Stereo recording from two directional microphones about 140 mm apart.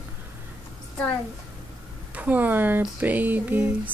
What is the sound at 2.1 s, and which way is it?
Speech, 10° right (ahead or behind).